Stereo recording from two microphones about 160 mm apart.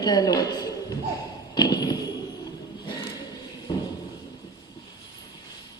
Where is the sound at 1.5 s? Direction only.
25° left (ahead or behind).